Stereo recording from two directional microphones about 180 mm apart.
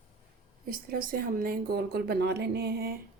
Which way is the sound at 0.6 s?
55° right (ahead or behind).